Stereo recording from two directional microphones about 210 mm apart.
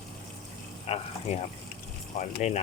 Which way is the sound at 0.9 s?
30° left (ahead or behind).